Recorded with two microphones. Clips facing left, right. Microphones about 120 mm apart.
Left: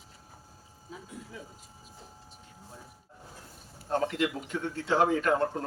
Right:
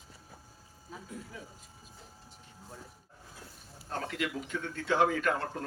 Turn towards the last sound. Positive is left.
turn(degrees=30)  # may be behind; listen again after turning